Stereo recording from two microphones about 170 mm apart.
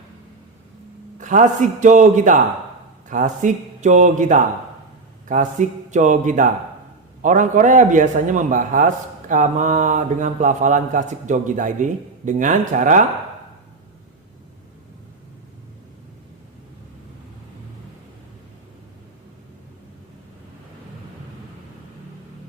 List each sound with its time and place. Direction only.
1.2 s speech: 45° right (ahead or behind)